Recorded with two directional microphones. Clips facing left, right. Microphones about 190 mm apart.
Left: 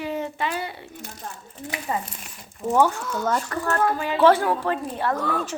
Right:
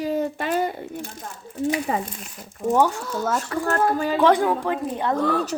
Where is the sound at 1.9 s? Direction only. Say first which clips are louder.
Right 3 dB; 90° right.